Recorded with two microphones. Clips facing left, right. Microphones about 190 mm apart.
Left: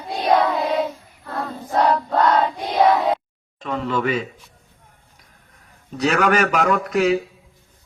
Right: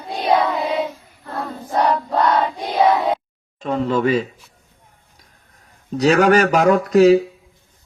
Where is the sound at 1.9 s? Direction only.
10° right (ahead or behind).